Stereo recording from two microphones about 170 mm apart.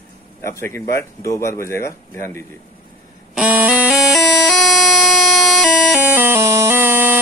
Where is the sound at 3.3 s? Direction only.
10° right (ahead or behind).